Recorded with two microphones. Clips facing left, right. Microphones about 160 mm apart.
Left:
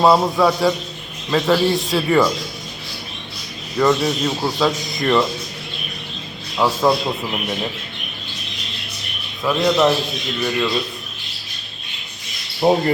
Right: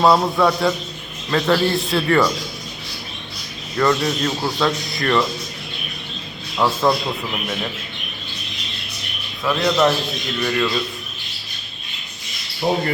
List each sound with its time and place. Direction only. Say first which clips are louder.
0.0 s a man's voice: left 1 dB; centre (ahead or behind)
3.8 s a man's voice: left 2 dB; centre (ahead or behind)
6.6 s a man's voice: left 1 dB; centre (ahead or behind)
9.4 s a man's voice: left 1 dB; centre (ahead or behind)
12.6 s speech: left 5 dB; 40° left (ahead or behind)